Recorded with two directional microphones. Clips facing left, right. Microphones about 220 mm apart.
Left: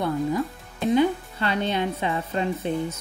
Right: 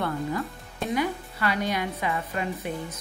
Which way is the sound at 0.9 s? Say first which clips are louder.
Left 7 dB; 25° left (ahead or behind).